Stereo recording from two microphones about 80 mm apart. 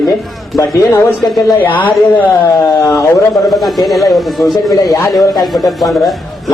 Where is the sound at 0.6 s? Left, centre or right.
Left.